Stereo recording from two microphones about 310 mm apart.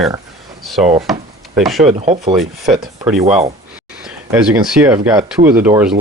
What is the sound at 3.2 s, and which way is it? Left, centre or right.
Speech, centre.